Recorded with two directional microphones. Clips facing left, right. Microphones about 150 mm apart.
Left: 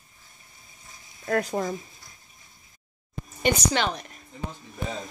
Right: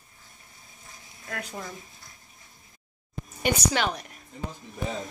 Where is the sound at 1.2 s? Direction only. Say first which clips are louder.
Left 11 dB; 45° left (ahead or behind).